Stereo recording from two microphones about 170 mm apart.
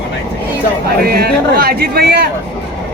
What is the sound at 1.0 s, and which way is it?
Speech, 65° right (ahead or behind).